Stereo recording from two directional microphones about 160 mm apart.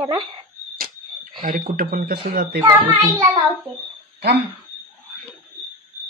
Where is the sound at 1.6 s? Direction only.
60° right (ahead or behind).